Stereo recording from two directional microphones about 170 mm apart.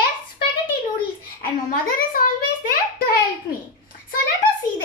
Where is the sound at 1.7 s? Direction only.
55° left (ahead or behind).